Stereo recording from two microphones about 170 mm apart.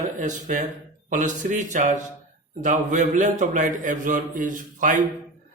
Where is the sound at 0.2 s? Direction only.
50° right (ahead or behind).